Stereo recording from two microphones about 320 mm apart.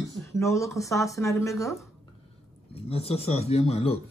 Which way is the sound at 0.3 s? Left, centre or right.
Centre.